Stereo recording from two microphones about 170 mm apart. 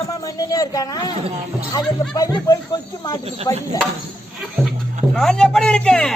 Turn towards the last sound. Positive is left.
turn(degrees=5)  # may be behind; listen again after turning